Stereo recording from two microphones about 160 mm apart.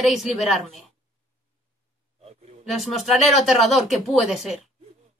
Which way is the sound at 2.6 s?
Centre (ahead or behind).